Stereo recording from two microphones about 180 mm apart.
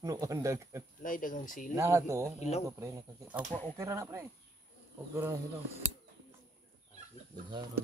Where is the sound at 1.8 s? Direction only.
15° right (ahead or behind).